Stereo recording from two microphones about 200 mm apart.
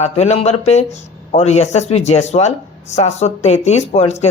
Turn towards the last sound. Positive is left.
turn(degrees=35)  # may be behind; listen again after turning